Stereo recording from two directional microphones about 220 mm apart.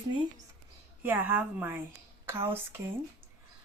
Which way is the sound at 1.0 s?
10° right (ahead or behind).